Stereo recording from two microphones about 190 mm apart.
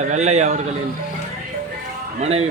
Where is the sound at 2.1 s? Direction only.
35° right (ahead or behind).